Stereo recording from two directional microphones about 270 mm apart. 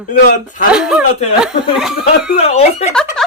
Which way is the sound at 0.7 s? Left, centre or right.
Centre.